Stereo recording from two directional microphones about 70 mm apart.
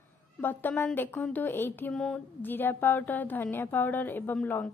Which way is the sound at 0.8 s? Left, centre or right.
Left.